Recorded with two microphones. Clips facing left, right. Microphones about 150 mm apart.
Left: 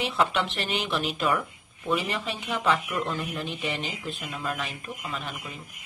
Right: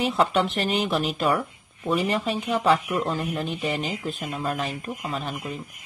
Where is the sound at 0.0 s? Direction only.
40° right (ahead or behind).